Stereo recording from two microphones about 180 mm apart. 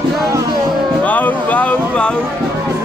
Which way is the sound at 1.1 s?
10° left (ahead or behind).